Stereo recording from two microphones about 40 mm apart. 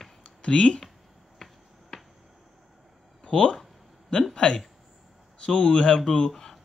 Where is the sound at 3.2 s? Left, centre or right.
Centre.